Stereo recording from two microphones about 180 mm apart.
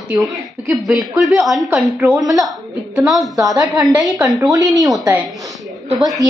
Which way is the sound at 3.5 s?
20° right (ahead or behind).